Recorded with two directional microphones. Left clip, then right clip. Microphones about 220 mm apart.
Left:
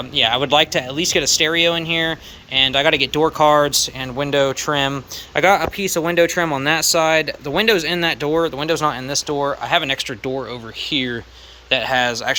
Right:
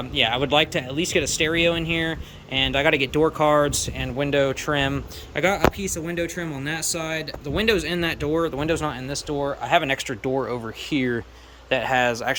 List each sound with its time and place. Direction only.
0.1 s speech: 15° right (ahead or behind)